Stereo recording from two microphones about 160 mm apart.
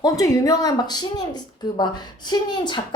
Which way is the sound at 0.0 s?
20° left (ahead or behind).